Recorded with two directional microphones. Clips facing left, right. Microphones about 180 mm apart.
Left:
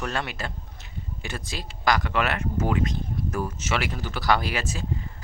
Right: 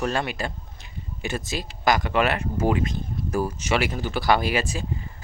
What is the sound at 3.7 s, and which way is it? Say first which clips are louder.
Speech: right 5 dB; 25° right (ahead or behind).